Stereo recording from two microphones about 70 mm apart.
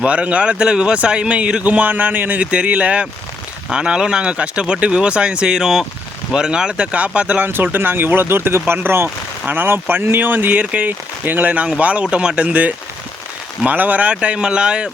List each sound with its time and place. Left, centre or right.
0.0 s a man's voice: centre